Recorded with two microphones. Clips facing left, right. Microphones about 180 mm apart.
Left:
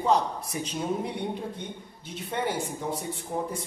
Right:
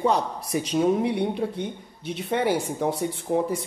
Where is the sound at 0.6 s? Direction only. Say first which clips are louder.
Right 9 dB; 80° right.